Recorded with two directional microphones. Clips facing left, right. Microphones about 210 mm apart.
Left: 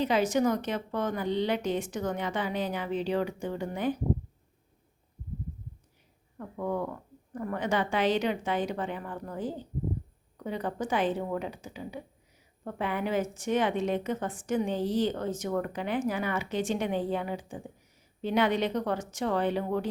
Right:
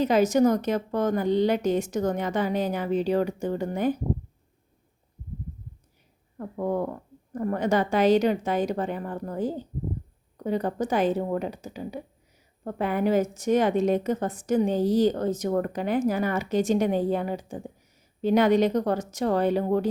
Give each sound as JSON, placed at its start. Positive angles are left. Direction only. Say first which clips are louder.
{"t": 0.0, "sound": "a woman's voice", "louder": "right 5 dB", "side_deg": -45}
{"t": 6.3, "sound": "a woman's voice", "louder": "right 5 dB", "side_deg": -40}